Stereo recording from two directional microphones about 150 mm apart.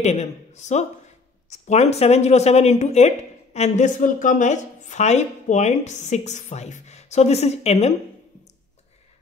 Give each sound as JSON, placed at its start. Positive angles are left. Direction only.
{"t": 0.0, "sound": "a woman's voice", "side_deg": 50}